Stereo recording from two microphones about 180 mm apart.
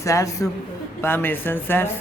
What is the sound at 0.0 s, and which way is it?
Speech, 20° left (ahead or behind).